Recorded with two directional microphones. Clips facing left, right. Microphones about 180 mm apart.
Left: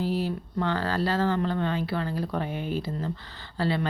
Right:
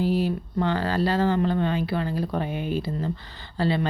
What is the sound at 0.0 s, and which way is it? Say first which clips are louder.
A woman's voice: right 4 dB; 15° right (ahead or behind).